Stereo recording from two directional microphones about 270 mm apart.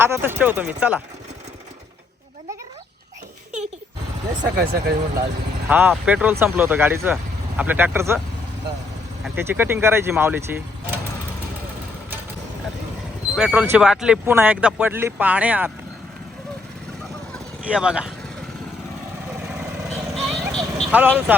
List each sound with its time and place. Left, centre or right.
0.0 s speech: centre
4.5 s speech: right
5.6 s speech: centre
9.2 s speech: centre
13.3 s speech: centre
17.7 s speech: centre
19.4 s vehicle: centre